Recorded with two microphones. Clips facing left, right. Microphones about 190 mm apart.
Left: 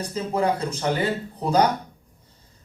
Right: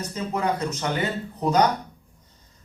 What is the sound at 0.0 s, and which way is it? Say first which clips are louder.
Speech: left 3 dB; 30° left (ahead or behind).